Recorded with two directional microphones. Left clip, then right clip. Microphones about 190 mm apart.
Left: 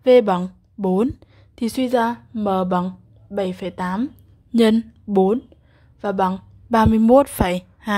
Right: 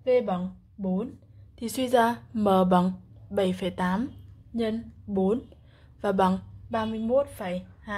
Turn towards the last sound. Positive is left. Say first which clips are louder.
# left 12 dB
turn(degrees=50)  # may be behind; listen again after turning